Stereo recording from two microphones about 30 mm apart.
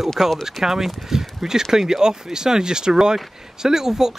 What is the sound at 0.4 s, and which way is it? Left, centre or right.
Speech, centre.